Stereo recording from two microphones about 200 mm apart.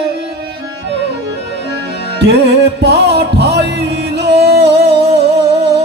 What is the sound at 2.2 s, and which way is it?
Music, 60° right (ahead or behind).